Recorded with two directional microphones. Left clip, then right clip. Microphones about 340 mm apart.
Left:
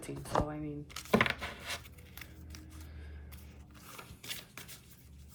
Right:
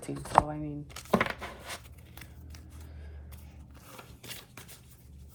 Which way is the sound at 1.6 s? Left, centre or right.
Centre.